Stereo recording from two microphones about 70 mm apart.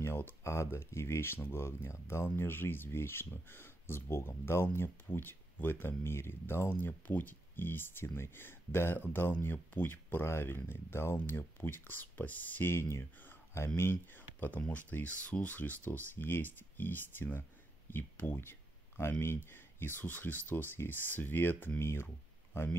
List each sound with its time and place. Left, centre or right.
0.0 s speech: left
14.7 s speech: left